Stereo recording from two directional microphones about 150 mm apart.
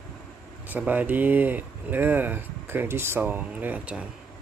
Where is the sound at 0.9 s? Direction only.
10° right (ahead or behind).